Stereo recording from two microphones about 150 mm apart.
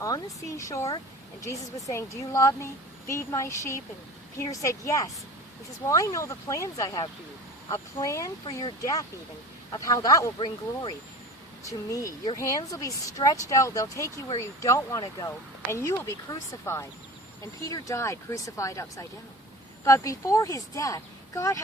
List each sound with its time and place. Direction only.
0.4 s speech: 20° left (ahead or behind)